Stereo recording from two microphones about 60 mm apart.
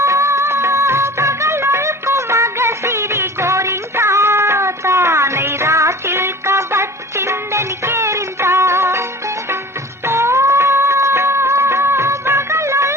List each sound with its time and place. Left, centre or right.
0.0 s music of bollywood: right
10.1 s music of bollywood: right